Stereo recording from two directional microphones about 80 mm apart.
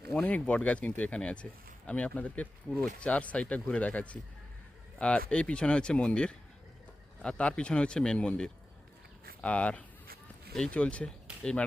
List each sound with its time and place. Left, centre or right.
0.1 s speech: centre